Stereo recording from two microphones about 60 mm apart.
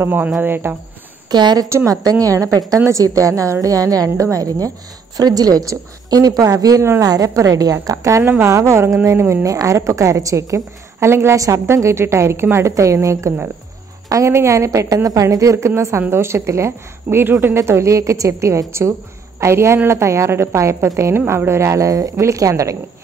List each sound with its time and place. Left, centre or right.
0.0 s speech: right
1.9 s a woman's voice: right
7.8 s a woman's voice: right
8.2 s speech: right
8.5 s speech: right
9.5 s a woman's voice: right
11.3 s a woman's voice: right
11.6 s a woman's voice: right
17.3 s a woman's voice: right